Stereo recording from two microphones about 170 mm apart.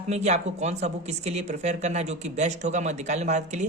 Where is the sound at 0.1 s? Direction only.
40° right (ahead or behind).